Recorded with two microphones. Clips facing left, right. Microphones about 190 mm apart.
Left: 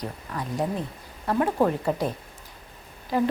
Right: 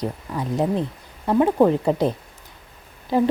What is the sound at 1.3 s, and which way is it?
A woman's voice, 20° right (ahead or behind).